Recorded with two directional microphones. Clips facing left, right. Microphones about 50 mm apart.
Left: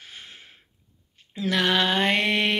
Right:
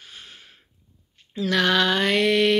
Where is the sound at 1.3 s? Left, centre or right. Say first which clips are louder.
Right 2 dB; centre.